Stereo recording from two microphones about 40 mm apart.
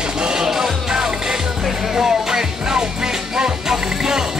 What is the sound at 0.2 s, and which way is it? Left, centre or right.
Music, centre.